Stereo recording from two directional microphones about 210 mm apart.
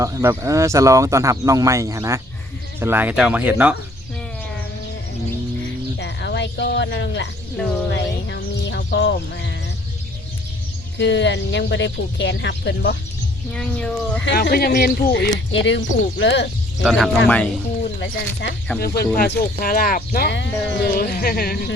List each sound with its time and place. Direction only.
0.0 s speech: 15° right (ahead or behind)
6.0 s a sound: 55° left (ahead or behind)
7.9 s speech: 55° left (ahead or behind)
10.9 s speech: 55° left (ahead or behind)
13.5 s speech: 5° left (ahead or behind)
14.3 s speech: 50° left (ahead or behind)
15.5 s speech: 60° left (ahead or behind)
16.8 s speech: centre (ahead or behind)
18.0 s speech: 50° left (ahead or behind)